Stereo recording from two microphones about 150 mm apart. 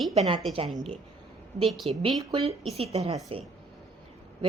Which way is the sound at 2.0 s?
35° right (ahead or behind).